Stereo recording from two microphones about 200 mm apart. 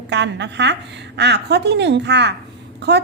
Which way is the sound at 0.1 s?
60° right (ahead or behind).